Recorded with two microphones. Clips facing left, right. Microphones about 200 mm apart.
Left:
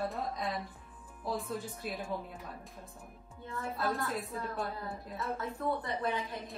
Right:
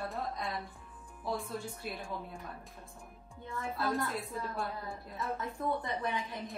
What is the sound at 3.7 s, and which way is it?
Speech, centre (ahead or behind).